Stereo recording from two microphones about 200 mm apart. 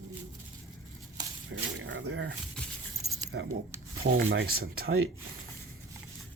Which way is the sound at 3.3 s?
55° right (ahead or behind).